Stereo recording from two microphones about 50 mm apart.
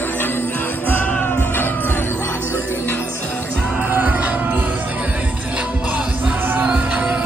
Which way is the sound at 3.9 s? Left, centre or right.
Right.